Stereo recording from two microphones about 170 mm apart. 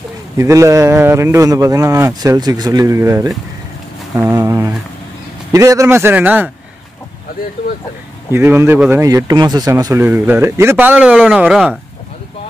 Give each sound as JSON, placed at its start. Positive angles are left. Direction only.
{"t": 0.4, "sound": "speech", "side_deg": -20}
{"t": 8.3, "sound": "speech", "side_deg": -15}